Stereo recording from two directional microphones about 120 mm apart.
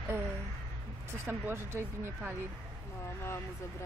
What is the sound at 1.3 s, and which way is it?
Speech, 20° right (ahead or behind).